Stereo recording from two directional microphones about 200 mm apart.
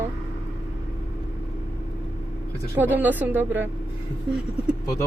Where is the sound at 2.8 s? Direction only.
10° right (ahead or behind).